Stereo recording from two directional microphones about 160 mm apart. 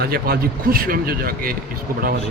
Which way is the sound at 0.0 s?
75° right (ahead or behind).